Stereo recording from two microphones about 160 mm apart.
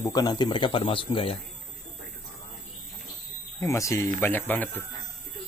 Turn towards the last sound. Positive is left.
turn(degrees=10)  # may be behind; listen again after turning